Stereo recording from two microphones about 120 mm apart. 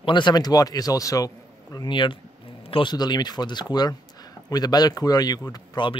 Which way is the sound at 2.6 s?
50° left (ahead or behind).